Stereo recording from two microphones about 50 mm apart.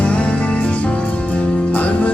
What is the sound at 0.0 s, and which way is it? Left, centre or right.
Music, left.